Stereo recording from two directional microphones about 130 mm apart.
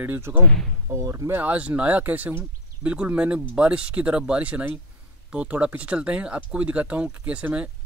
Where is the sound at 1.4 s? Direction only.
10° right (ahead or behind).